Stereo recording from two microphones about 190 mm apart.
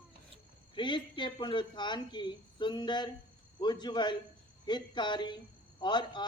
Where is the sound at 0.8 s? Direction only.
25° left (ahead or behind).